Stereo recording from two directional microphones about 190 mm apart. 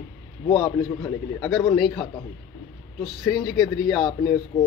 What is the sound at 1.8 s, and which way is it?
Speech, centre (ahead or behind).